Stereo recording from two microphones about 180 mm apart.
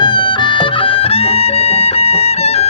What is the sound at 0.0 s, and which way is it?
Music, 25° left (ahead or behind).